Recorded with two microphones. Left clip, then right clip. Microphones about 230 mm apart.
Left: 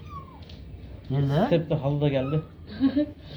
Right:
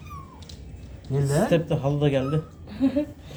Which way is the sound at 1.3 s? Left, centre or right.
Centre.